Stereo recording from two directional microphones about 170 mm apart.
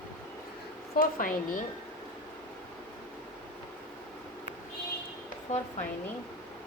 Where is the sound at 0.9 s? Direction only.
55° left (ahead or behind).